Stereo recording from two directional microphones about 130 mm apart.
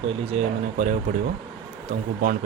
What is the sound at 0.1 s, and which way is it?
Speech, 55° right (ahead or behind).